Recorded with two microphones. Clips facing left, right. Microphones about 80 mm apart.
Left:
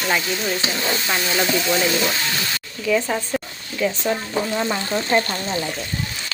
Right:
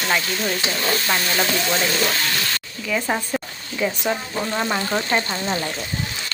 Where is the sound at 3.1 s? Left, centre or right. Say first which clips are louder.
Left 1 dB; centre.